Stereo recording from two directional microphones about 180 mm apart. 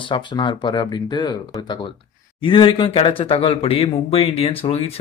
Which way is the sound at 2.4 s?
30° left (ahead or behind).